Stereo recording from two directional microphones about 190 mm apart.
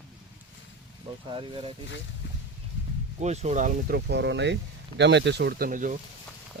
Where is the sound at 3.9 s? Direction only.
65° right (ahead or behind); by 6.0 s 45° right (ahead or behind).